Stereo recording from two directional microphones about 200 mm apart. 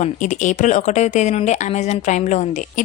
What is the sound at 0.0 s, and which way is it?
A woman's voice, 35° left (ahead or behind).